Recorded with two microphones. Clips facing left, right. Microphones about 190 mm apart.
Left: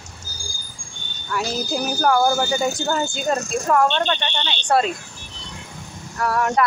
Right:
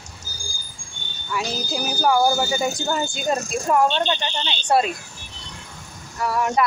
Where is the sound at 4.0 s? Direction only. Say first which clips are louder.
Left 1 dB; 30° right (ahead or behind).